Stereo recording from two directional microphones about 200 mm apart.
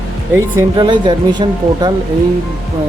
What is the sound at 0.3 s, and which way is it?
Speech, 20° right (ahead or behind).